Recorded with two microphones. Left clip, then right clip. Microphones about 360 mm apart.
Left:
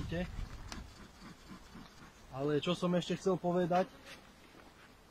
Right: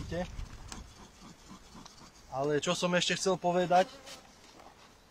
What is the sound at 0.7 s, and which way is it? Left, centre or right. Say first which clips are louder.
Vehicle: right 1 dB; centre.